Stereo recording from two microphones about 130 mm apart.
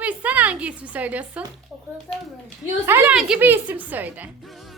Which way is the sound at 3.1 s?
5° right (ahead or behind).